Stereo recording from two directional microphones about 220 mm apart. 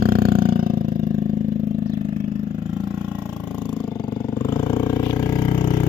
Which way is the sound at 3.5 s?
5° right (ahead or behind).